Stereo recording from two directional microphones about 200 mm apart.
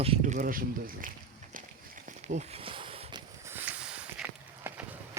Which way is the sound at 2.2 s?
35° right (ahead or behind).